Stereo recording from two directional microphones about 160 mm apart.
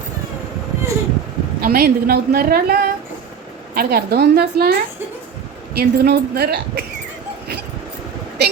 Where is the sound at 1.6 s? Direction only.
70° right (ahead or behind).